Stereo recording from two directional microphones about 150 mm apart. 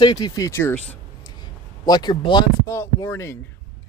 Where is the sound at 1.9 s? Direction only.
30° left (ahead or behind).